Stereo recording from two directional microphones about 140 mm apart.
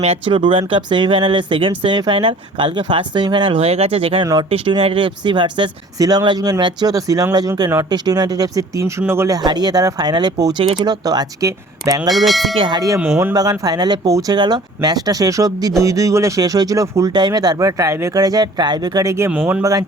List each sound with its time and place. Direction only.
0.0 s speech: 45° right (ahead or behind); by 10.5 s 30° right (ahead or behind)
10.6 s speech: 40° right (ahead or behind)
11.0 s speech: 30° right (ahead or behind)
12.1 s speech: centre (ahead or behind)
12.5 s speech: 35° right (ahead or behind)
13.0 s speech: 15° right (ahead or behind)